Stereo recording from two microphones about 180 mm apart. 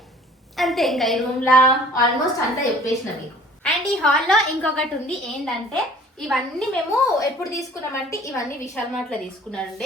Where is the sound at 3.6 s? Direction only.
5° left (ahead or behind).